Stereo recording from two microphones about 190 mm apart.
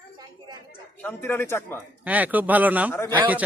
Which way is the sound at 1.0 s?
10° left (ahead or behind).